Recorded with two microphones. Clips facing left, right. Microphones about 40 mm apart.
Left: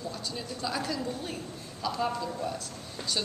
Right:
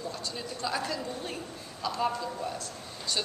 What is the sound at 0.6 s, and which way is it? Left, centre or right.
Speech, centre.